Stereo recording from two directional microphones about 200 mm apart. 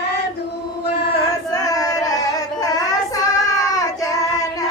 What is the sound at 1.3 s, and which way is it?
Music, 15° left (ahead or behind).